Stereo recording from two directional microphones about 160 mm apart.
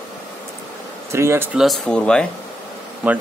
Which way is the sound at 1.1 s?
15° right (ahead or behind).